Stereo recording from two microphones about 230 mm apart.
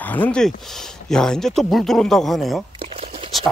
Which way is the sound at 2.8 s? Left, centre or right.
Right.